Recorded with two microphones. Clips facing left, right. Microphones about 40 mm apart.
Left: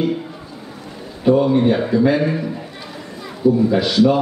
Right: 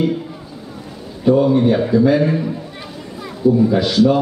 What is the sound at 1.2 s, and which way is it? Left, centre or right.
Speech, centre.